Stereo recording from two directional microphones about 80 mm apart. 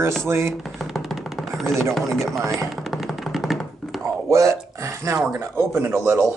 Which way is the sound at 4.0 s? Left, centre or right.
Right.